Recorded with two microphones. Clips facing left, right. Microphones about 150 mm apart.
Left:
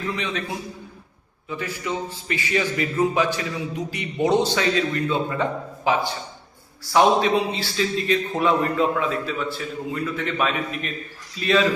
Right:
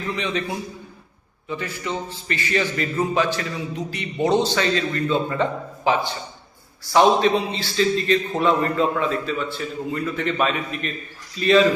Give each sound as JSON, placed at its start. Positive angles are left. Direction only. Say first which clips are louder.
{"t": 0.2, "sound": "a man's voice", "louder": "right 3 dB", "side_deg": 5}